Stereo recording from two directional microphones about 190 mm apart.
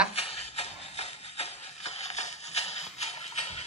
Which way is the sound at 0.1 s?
30° left (ahead or behind).